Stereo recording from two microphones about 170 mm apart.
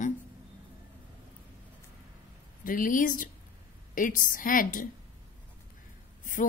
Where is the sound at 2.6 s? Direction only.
55° left (ahead or behind).